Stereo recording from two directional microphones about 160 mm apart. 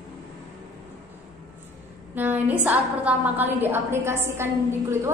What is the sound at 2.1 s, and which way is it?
A woman's voice, 10° right (ahead or behind).